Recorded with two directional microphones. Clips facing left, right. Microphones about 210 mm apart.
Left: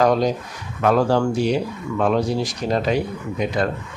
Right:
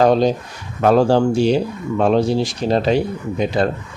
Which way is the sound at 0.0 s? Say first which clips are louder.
Right 4 dB; 30° right (ahead or behind).